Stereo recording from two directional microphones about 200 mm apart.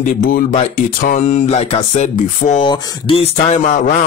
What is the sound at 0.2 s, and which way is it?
Speech, 45° left (ahead or behind).